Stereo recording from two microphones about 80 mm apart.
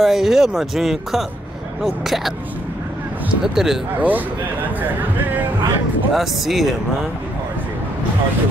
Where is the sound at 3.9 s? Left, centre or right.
Right.